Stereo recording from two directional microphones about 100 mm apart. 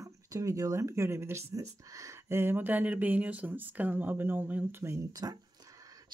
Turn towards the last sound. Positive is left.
turn(degrees=-40)  # may be behind; listen again after turning